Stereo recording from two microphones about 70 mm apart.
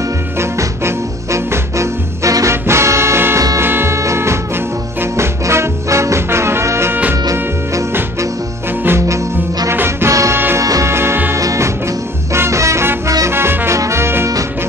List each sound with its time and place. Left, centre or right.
0.4 s music: right
3.3 s music: right
3.6 s music: right
9.7 s music: right
10.9 s music: right